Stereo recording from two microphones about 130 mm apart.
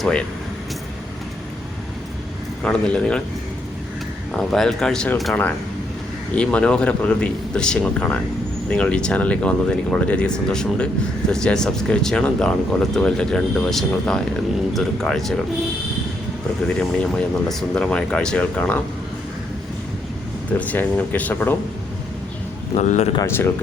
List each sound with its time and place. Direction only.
0.0 s speech: 5° left (ahead or behind)
2.6 s speech: 10° left (ahead or behind)
4.3 s speech: 5° left (ahead or behind)
16.6 s speech: 5° left (ahead or behind)
20.6 s speech: 15° left (ahead or behind)
22.7 s speech: 60° left (ahead or behind)
23.2 s speech: 20° left (ahead or behind)